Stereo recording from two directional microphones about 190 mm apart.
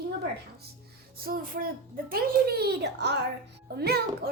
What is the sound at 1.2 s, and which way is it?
A child's voice, 50° right (ahead or behind).